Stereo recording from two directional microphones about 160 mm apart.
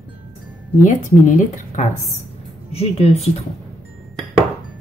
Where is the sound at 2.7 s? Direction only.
40° left (ahead or behind).